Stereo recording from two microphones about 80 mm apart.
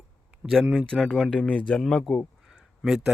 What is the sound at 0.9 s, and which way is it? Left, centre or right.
Speech, centre.